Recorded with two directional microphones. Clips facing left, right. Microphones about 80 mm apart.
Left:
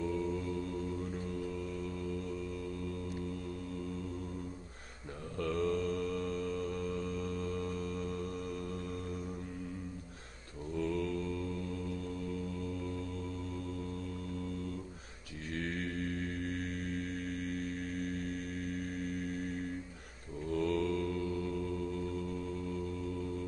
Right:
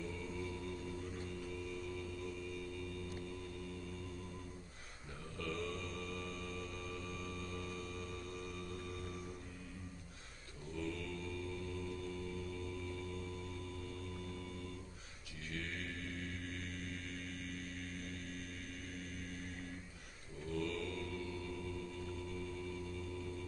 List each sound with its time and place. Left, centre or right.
0.1 s a capella: left
5.4 s mantra: left
10.8 s mantra: left
16.4 s music: left
20.5 s mantra: left